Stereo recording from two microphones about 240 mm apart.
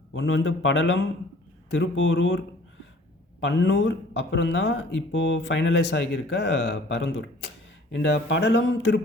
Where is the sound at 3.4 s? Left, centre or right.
Left.